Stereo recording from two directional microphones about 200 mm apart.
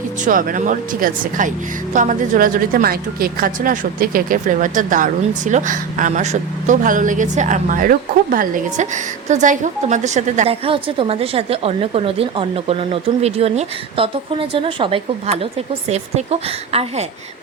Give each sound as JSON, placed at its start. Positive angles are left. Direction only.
{"t": 0.3, "sound": "a woman's voice", "side_deg": -45}